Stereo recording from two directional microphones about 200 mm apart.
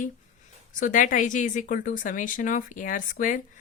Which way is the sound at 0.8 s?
40° left (ahead or behind).